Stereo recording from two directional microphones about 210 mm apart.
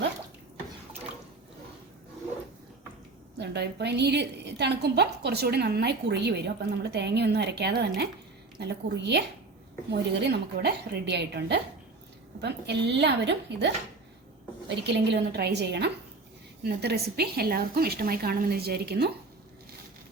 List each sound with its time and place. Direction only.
3.3 s a woman's voice: 55° right (ahead or behind)
14.8 s a woman's voice: 55° right (ahead or behind)